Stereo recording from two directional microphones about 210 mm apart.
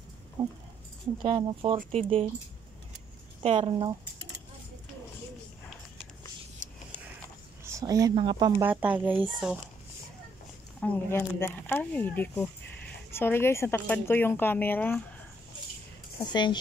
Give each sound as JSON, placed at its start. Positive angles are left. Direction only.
{"t": 0.4, "sound": "speech", "side_deg": -20}
{"t": 3.4, "sound": "speech", "side_deg": -25}
{"t": 7.6, "sound": "speech", "side_deg": -15}
{"t": 8.6, "sound": "speech", "side_deg": -5}
{"t": 10.8, "sound": "speech", "side_deg": 10}
{"t": 16.2, "sound": "speech", "side_deg": 20}